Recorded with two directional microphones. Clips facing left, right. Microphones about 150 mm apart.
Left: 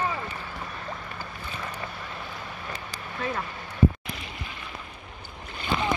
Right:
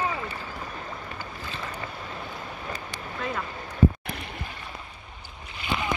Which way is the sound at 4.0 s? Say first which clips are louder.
Right 2 dB; 60° right (ahead or behind).